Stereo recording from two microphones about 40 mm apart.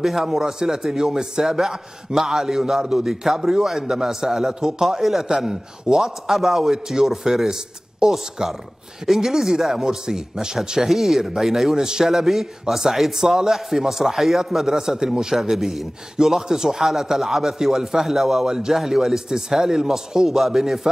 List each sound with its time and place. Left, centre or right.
0.0 s a man's voice: centre